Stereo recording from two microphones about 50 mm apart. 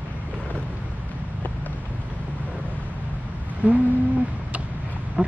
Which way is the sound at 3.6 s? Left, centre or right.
Right.